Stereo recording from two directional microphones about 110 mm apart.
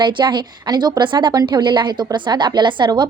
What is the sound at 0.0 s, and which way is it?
A woman's voice, 45° right (ahead or behind).